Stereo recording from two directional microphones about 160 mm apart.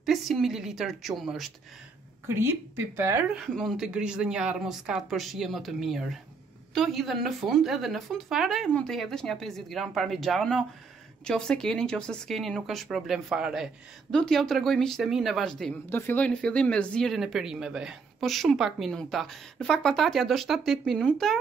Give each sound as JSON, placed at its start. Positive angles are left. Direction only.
{"t": 0.0, "sound": "speech", "side_deg": 0}
{"t": 2.2, "sound": "speech", "side_deg": -15}
{"t": 3.3, "sound": "speech", "side_deg": 0}
{"t": 15.9, "sound": "speech", "side_deg": 15}